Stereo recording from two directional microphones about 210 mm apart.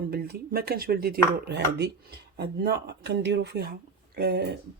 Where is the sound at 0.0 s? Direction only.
45° right (ahead or behind).